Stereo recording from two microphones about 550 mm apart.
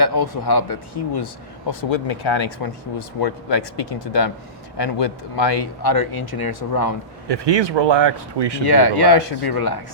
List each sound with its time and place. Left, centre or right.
0.0 s speech: left
1.8 s speech: left
7.3 s speech: right
8.7 s speech: left